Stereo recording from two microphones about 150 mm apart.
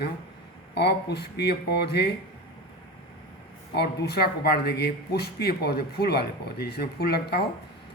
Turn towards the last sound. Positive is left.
turn(degrees=90)